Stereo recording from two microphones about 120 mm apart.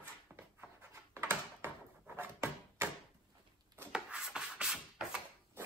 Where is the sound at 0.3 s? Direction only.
10° right (ahead or behind).